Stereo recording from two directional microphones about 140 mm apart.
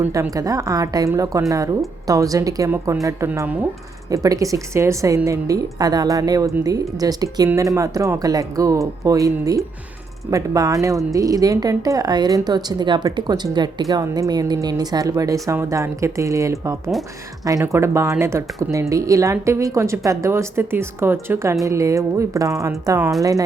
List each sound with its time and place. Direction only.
0.0 s a woman's voice: 20° right (ahead or behind)